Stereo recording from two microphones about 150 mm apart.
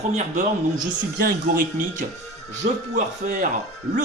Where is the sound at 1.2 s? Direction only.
75° right (ahead or behind).